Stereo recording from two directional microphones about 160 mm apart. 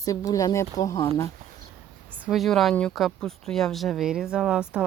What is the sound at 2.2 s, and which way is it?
Speech, centre (ahead or behind).